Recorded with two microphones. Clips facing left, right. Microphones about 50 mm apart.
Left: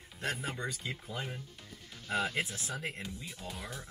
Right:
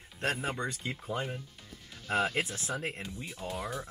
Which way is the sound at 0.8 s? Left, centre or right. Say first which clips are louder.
Right 4 dB; right.